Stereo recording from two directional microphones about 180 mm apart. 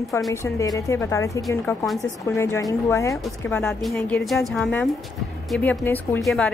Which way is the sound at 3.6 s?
5° left (ahead or behind).